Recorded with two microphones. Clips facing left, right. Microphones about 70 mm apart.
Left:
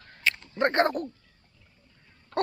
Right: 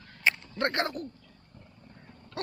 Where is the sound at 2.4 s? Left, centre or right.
Left.